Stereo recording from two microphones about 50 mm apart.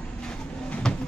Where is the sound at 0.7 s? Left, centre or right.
Centre.